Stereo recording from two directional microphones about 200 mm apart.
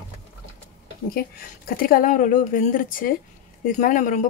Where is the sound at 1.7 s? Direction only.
45° left (ahead or behind).